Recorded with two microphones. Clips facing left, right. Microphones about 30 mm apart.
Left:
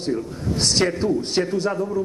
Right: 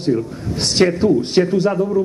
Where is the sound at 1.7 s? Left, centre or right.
Right.